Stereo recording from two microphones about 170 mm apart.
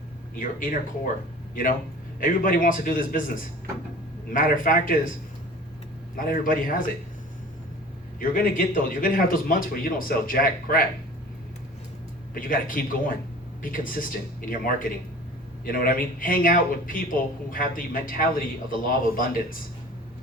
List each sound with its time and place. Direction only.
0.3 s speech: 55° left (ahead or behind)
2.2 s speech: 55° left (ahead or behind)
4.3 s speech: 55° left (ahead or behind)
6.1 s speech: 55° left (ahead or behind)
8.2 s speech: 50° left (ahead or behind)
12.3 s speech: 55° left (ahead or behind)